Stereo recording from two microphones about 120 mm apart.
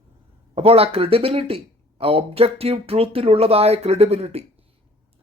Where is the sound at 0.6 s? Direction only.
55° right (ahead or behind).